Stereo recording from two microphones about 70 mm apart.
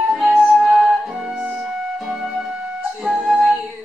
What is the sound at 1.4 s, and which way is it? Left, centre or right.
Music, centre.